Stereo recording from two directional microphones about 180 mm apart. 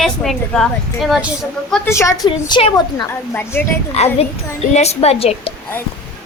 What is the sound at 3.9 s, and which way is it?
A woman's voice, 35° left (ahead or behind).